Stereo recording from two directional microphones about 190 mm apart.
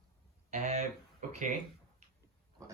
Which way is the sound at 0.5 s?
40° right (ahead or behind).